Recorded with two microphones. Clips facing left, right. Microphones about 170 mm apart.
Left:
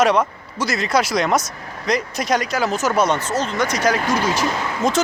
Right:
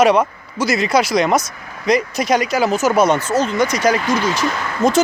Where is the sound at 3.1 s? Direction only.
40° right (ahead or behind).